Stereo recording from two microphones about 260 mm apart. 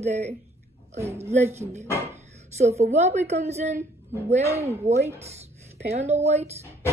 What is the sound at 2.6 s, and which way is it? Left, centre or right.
A woman's voice, right.